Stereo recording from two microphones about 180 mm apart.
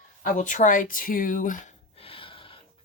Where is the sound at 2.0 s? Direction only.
30° left (ahead or behind).